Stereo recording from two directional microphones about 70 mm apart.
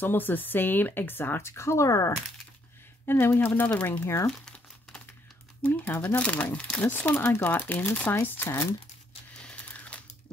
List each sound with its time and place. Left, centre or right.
0.0 s speech: left
3.1 s speech: left
4.0 s speech: left
4.3 s crumpling: centre
5.6 s speech: left
9.4 s a sound: centre